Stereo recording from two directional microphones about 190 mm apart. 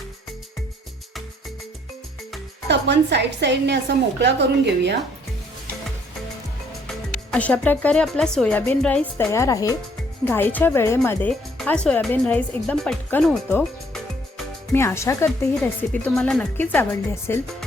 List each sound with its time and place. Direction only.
2.6 s a woman's voice: 65° right (ahead or behind)
6.8 s speech: 5° left (ahead or behind)
14.7 s speech: 15° left (ahead or behind)